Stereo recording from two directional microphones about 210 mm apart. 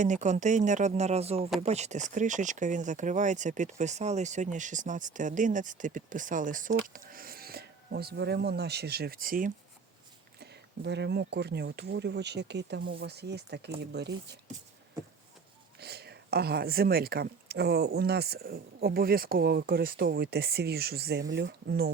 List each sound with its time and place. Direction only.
0.0 s speech: 35° right (ahead or behind)
10.4 s speech: 55° right (ahead or behind)
15.8 s speech: 50° right (ahead or behind)